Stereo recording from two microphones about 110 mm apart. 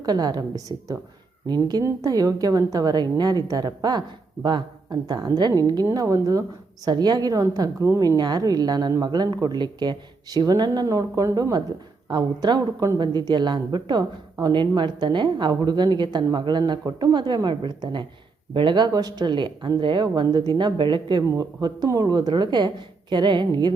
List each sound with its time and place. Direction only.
0.0 s a woman's voice: 35° right (ahead or behind)
12.0 s a woman's voice: 40° right (ahead or behind)